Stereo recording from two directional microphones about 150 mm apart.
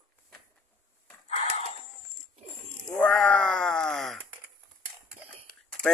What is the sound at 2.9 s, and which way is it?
A man's voice, 10° left (ahead or behind).